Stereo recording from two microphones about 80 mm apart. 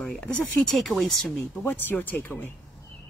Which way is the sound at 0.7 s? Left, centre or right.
Centre.